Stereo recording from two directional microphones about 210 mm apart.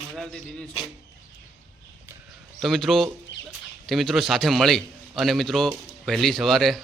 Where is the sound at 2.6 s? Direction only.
Centre (ahead or behind).